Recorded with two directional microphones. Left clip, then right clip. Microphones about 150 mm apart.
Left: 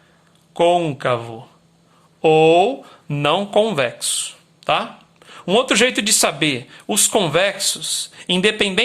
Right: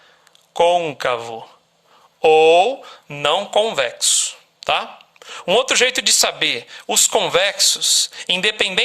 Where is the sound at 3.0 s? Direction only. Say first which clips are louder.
Even; 10° right (ahead or behind).